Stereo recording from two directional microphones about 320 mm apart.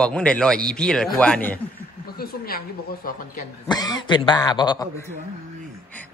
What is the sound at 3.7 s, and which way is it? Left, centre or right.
Speech, centre.